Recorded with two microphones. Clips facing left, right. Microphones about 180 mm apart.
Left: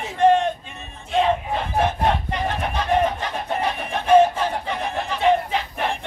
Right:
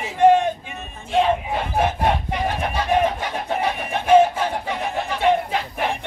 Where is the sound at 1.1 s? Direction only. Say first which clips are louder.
Right 1 dB; 5° right (ahead or behind).